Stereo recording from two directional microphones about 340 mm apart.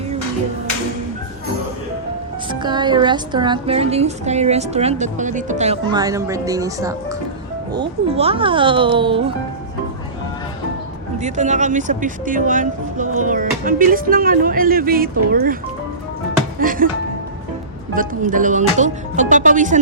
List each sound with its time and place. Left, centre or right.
2.5 s a woman's voice: centre
11.2 s speech: right
16.6 s speech: right
17.9 s speech: right